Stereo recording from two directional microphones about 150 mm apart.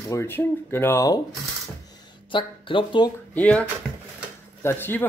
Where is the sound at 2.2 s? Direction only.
35° left (ahead or behind).